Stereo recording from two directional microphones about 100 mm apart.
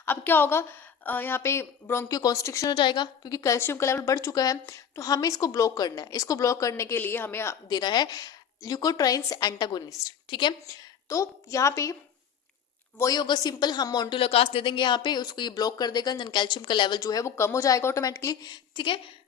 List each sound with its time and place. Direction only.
0.0 s a woman's voice: 20° left (ahead or behind)
2.0 s a woman's voice: 40° left (ahead or behind)
2.6 s a woman's voice: 50° left (ahead or behind); by 7.5 s 25° left (ahead or behind)
7.7 s a woman's voice: 45° left (ahead or behind)
11.1 s a woman's voice: 30° left (ahead or behind)
13.1 s a woman's voice: 45° left (ahead or behind)
14.2 s a woman's voice: 70° left (ahead or behind); by 17.0 s 50° left (ahead or behind)
17.0 s speech: 35° left (ahead or behind)
18.4 s a woman's voice: 50° left (ahead or behind)